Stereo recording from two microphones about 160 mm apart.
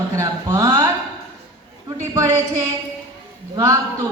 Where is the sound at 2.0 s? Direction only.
20° right (ahead or behind).